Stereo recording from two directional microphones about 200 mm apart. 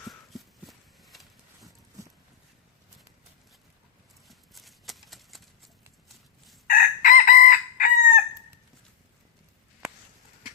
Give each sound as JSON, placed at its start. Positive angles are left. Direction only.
{"t": 0.1, "sound": "horse", "side_deg": 0}
{"t": 4.3, "sound": "a sound", "side_deg": 0}
{"t": 6.1, "sound": "fowl", "side_deg": 0}
{"t": 6.7, "sound": "chicken", "side_deg": 45}